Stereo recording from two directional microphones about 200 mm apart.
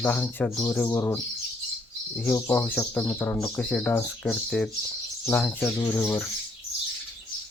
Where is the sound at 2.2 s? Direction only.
10° left (ahead or behind).